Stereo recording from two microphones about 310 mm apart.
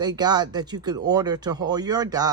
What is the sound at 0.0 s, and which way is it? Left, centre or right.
Speech, centre.